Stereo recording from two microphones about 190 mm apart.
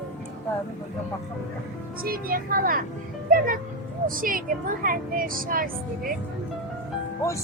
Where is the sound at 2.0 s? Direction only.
50° right (ahead or behind).